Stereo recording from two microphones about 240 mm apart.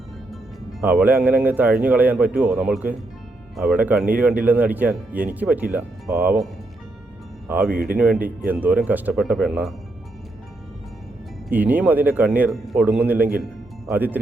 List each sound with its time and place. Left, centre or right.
0.3 s speech: centre
7.7 s speech: right
7.9 s speech: centre
11.4 s speech: centre